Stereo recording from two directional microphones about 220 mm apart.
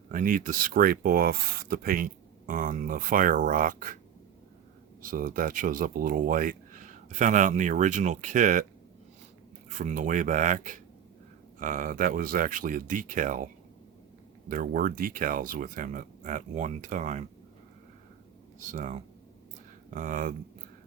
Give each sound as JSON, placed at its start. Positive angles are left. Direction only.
{"t": 0.1, "sound": "speech", "side_deg": -40}
{"t": 5.0, "sound": "speech", "side_deg": -40}
{"t": 9.6, "sound": "speech", "side_deg": -35}
{"t": 18.6, "sound": "speech", "side_deg": -35}